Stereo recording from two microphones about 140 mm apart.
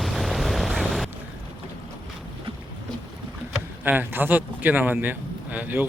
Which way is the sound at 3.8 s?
15° right (ahead or behind).